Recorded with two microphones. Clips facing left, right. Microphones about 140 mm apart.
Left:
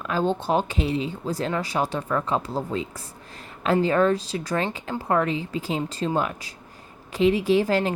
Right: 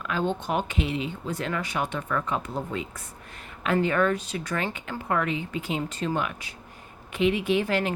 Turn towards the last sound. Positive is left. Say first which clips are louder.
# left 4 dB
turn(degrees=35)  # may be behind; listen again after turning